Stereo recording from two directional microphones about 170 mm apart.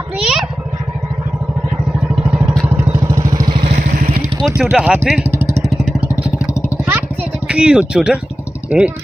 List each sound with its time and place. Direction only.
0.2 s a sound: 5° right (ahead or behind)
2.1 s vehicle: 5° right (ahead or behind); by 3.7 s 30° right (ahead or behind)
3.7 s vehicle: 55° right (ahead or behind)
4.6 s speech: 5° right (ahead or behind)
6.8 s a sound: 10° right (ahead or behind)
8.6 s speech: 5° right (ahead or behind)